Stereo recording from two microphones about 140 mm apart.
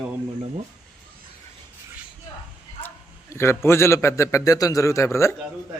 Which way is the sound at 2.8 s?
20° left (ahead or behind).